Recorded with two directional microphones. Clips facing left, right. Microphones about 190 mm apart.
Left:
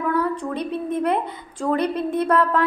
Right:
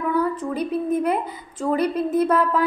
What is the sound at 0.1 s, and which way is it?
A woman's voice, 5° right (ahead or behind).